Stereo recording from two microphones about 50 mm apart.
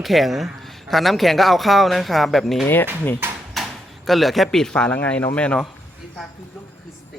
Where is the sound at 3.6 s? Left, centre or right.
Centre.